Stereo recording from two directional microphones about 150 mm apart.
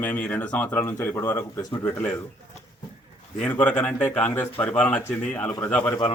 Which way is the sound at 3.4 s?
10° left (ahead or behind).